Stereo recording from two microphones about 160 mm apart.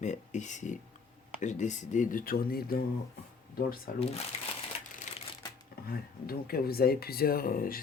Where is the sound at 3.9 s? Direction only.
65° left (ahead or behind).